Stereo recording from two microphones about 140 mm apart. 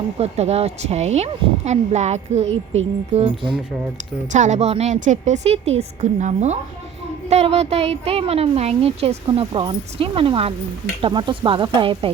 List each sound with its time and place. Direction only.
0.2 s speech: 50° right (ahead or behind)
4.3 s a woman's voice: 60° right (ahead or behind); by 12.1 s 40° right (ahead or behind)